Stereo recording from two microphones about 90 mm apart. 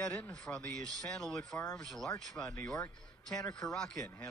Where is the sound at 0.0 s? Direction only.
10° left (ahead or behind).